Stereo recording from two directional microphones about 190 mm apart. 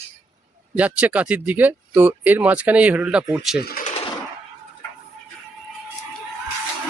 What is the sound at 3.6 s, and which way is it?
Speech, 55° left (ahead or behind).